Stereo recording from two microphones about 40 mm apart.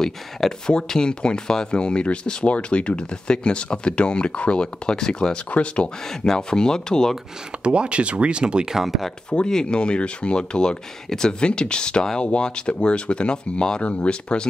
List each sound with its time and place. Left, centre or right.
0.0 s speech: centre
5.5 s speech: left
6.0 s speech: centre
7.6 s speech: right
8.6 s speech: centre
9.5 s speech: centre